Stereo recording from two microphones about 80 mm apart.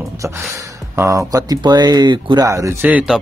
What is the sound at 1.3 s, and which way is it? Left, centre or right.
Speech, right.